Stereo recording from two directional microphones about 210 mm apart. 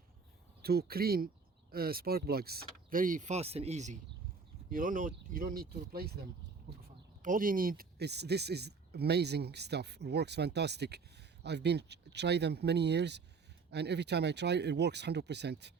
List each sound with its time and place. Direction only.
0.6 s speech: 45° right (ahead or behind)
7.2 s speech: 40° right (ahead or behind)